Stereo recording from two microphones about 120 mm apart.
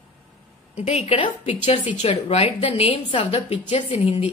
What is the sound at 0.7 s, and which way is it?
Speech, 60° left (ahead or behind).